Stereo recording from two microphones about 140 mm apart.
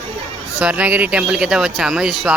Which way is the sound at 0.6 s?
10° right (ahead or behind).